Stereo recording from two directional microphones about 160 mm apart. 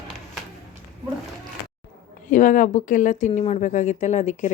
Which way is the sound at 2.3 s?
55° left (ahead or behind).